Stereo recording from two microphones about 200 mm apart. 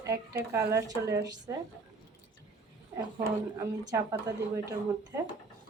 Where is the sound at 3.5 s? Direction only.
20° right (ahead or behind).